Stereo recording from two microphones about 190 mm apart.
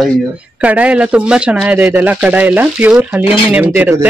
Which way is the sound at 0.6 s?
5° right (ahead or behind).